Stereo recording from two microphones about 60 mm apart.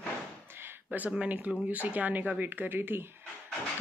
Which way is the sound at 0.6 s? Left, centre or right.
Right.